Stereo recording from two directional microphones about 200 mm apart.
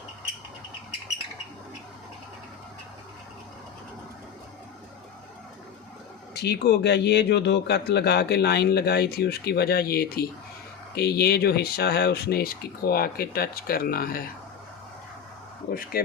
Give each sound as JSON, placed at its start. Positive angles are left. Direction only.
{"t": 6.3, "sound": "a man's voice", "side_deg": 55}
{"t": 15.7, "sound": "speech", "side_deg": 45}